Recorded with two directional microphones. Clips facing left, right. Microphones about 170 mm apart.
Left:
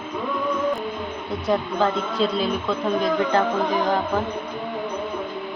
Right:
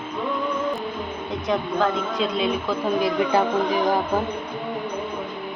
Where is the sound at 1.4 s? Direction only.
5° left (ahead or behind).